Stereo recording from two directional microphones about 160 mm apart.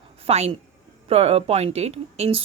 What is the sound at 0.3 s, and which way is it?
Speech, 40° right (ahead or behind).